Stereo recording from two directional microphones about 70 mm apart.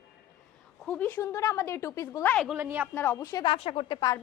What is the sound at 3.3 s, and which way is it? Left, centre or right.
Speech, left.